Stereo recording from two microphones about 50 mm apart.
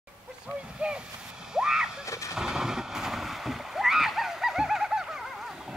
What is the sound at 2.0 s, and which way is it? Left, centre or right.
Vehicle, left.